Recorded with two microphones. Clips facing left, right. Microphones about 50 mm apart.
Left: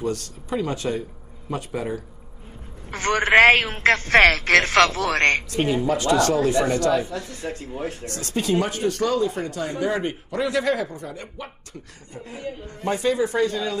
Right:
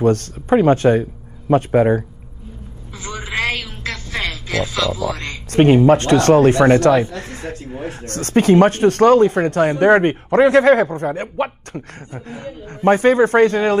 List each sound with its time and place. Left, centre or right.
0.0 s speech: right
2.9 s telephone: left
3.4 s speech: left
5.5 s speech: right